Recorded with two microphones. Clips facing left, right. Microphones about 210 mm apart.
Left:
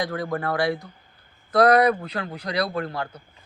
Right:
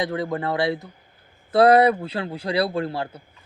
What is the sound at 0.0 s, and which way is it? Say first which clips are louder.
A man's voice: right 2 dB; 20° right (ahead or behind).